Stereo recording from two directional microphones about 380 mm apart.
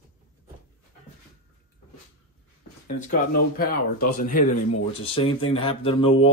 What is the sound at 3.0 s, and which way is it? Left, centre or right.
Speech, left.